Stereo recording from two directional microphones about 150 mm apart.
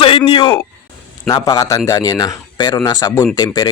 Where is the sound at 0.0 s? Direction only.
35° left (ahead or behind).